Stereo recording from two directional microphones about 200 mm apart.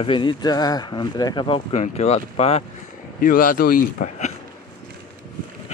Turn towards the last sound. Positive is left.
turn(degrees=40)  # may be behind; listen again after turning